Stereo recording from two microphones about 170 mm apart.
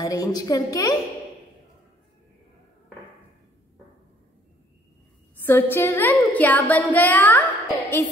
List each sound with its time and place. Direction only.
0.0 s a woman's voice: 20° left (ahead or behind)
5.4 s child singing: 15° left (ahead or behind)